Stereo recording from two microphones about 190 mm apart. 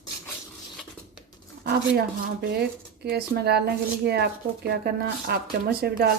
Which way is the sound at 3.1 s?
55° right (ahead or behind).